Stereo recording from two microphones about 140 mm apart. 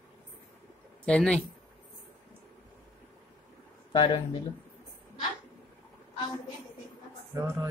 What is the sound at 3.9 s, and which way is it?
Speech, 35° left (ahead or behind).